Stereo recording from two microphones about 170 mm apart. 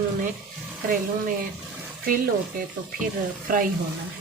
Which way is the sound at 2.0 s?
55° right (ahead or behind).